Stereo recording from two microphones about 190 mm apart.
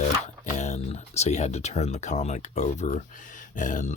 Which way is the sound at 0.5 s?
35° left (ahead or behind).